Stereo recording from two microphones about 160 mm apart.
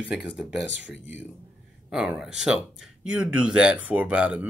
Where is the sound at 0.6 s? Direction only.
90° left.